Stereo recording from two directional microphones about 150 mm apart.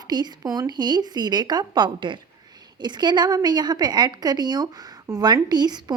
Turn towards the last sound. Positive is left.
turn(degrees=-30)  # may be behind; listen again after turning